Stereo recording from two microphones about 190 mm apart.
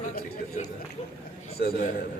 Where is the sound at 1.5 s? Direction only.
55° left (ahead or behind).